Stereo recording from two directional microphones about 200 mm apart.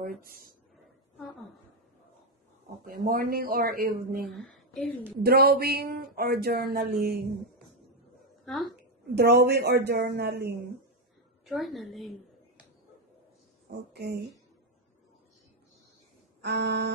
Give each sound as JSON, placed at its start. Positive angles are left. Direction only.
{"t": 0.2, "sound": "speech", "side_deg": -45}
{"t": 2.8, "sound": "speech", "side_deg": -45}
{"t": 4.3, "sound": "speech", "side_deg": 0}
{"t": 5.2, "sound": "speech", "side_deg": -50}
{"t": 8.5, "sound": "a woman's voice", "side_deg": 0}
{"t": 9.1, "sound": "a woman's voice", "side_deg": -55}
{"t": 11.4, "sound": "a woman's voice", "side_deg": 0}
{"t": 13.9, "sound": "a woman's voice", "side_deg": -55}
{"t": 16.4, "sound": "a woman's voice", "side_deg": -55}